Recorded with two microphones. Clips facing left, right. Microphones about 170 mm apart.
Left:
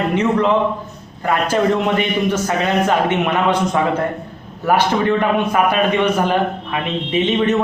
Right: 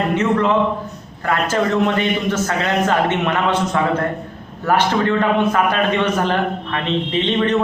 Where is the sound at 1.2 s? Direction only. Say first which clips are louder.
Left 2 dB; 15° left (ahead or behind).